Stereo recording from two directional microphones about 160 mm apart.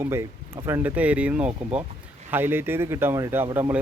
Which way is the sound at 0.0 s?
15° right (ahead or behind).